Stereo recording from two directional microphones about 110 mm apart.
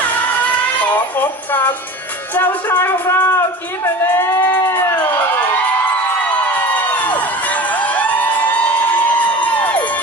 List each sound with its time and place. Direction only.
0.8 s speech: 15° left (ahead or behind)
6.5 s music: 15° left (ahead or behind)